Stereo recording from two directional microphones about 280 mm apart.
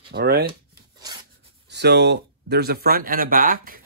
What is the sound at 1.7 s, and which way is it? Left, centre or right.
Speech, right.